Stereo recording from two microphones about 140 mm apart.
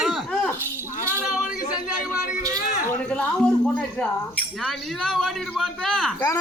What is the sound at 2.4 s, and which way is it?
Speech, 25° right (ahead or behind).